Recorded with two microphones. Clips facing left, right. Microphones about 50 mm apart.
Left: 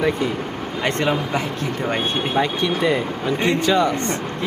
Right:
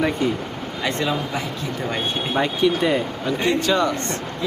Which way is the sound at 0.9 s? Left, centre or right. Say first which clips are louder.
Left 3 dB; left.